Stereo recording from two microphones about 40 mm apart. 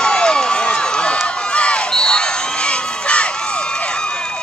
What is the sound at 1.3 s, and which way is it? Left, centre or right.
Crowd, left.